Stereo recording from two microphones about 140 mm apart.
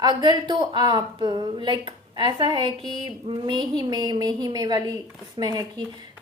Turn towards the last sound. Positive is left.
turn(degrees=-25)  # may be behind; listen again after turning